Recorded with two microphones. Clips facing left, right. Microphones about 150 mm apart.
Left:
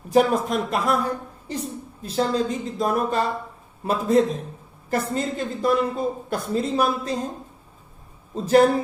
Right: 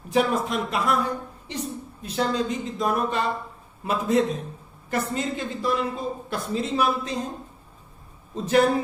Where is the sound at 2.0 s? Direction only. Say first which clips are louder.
Left 2 dB; 35° left (ahead or behind).